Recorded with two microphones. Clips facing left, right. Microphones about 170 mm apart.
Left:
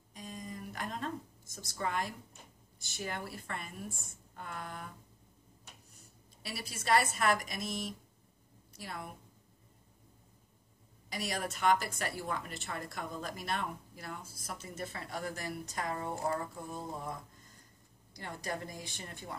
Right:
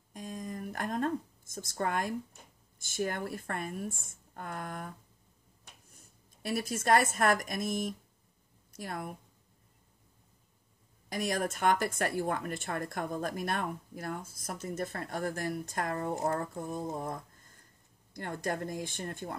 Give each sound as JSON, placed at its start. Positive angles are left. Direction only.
{"t": 0.1, "sound": "a sound", "side_deg": -50}
{"t": 2.8, "sound": "speech", "side_deg": -50}
{"t": 5.9, "sound": "speech", "side_deg": -50}
{"t": 11.1, "sound": "speech", "side_deg": -50}